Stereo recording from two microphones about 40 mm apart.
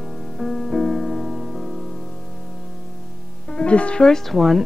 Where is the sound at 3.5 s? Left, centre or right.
Left.